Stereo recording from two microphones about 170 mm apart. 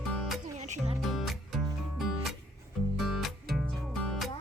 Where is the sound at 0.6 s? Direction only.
40° right (ahead or behind).